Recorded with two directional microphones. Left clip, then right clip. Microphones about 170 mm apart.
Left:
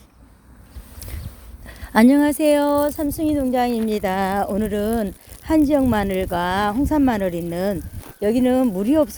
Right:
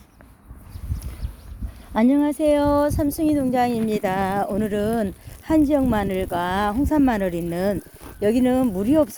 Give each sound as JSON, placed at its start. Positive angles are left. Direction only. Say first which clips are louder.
{"t": 1.9, "sound": "speech", "louder": "left 4 dB", "side_deg": 35}
{"t": 2.6, "sound": "speech", "louder": "left 1 dB", "side_deg": 10}